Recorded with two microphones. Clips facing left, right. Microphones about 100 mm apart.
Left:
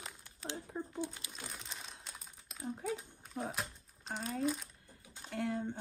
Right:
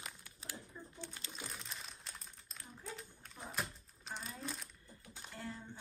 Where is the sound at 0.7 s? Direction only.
60° left (ahead or behind).